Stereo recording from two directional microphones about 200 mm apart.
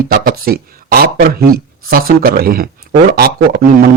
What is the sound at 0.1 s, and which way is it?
A man's voice, 45° right (ahead or behind).